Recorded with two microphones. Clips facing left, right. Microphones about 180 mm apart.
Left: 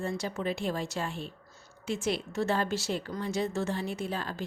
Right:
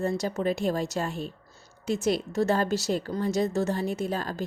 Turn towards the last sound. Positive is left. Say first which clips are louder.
# right 5 dB
turn(degrees=-40)  # may be behind; listen again after turning